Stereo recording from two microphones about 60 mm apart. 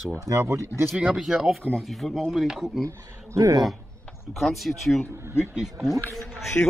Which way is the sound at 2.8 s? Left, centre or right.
Right.